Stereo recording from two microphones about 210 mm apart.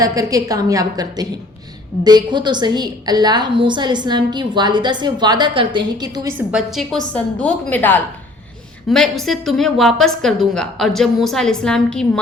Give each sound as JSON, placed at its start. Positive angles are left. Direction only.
{"t": 0.0, "sound": "a woman's voice", "side_deg": -15}